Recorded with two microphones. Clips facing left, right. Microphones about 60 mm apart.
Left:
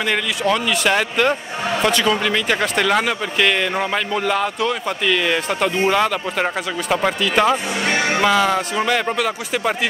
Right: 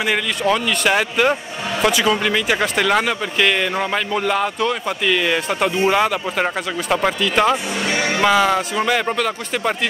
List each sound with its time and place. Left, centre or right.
0.0 s speech: centre
7.8 s speech: left
8.2 s speech: centre